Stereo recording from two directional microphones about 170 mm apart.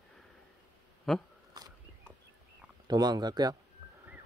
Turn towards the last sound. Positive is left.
turn(degrees=-25)  # may be behind; listen again after turning